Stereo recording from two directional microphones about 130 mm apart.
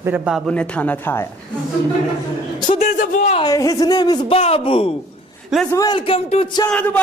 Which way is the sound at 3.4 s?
25° left (ahead or behind).